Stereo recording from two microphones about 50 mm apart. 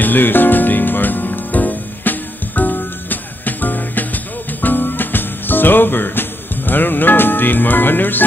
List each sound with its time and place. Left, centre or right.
0.0 s music: left